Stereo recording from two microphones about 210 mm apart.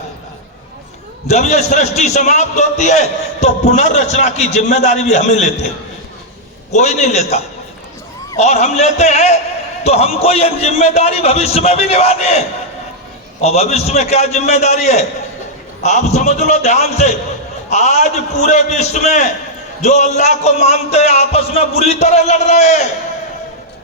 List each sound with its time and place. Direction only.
1.3 s a man's voice: 30° left (ahead or behind)
6.7 s a man's voice: 35° left (ahead or behind)
13.4 s a man's voice: 30° left (ahead or behind)